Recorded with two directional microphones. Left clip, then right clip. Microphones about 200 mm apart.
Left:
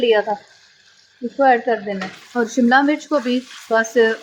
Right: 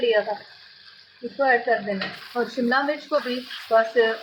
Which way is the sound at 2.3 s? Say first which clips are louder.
Left 8 dB; 55° left (ahead or behind).